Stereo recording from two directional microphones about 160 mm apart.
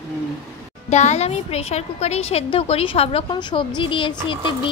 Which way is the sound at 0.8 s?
45° left (ahead or behind).